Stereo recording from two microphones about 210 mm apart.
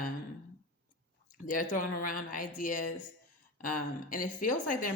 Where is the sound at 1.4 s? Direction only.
40° left (ahead or behind).